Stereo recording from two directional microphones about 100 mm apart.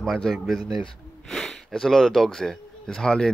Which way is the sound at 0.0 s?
5° left (ahead or behind).